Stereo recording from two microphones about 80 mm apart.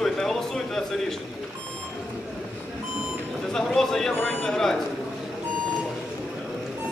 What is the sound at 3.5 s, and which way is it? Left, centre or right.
A man's voice, centre.